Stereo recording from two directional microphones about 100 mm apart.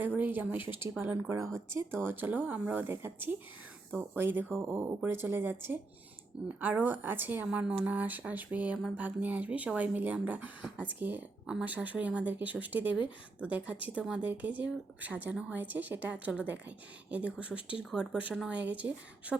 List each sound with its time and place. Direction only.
0.2 s speech: 20° right (ahead or behind)